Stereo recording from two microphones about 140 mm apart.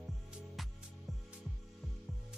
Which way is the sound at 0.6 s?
Centre (ahead or behind).